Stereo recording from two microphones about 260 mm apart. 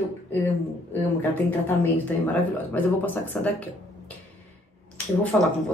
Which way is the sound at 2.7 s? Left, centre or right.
Centre.